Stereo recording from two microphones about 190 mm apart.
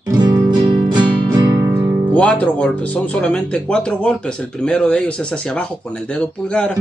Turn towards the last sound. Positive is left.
turn(degrees=5)  # may be behind; listen again after turning